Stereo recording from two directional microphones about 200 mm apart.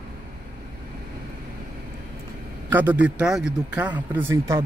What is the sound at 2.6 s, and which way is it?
A man's voice, 10° right (ahead or behind).